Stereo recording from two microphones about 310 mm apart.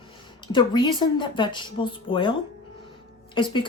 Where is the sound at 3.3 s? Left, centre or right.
Centre.